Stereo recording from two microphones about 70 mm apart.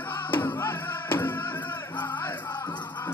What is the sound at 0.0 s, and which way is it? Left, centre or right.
Music, left.